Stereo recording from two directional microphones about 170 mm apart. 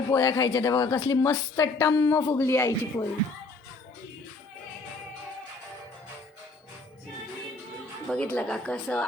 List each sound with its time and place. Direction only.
0.1 s a woman's voice: 20° left (ahead or behind)
8.1 s speech: 5° left (ahead or behind)